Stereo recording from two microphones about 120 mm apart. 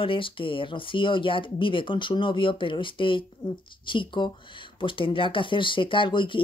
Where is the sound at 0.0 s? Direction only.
45° left (ahead or behind).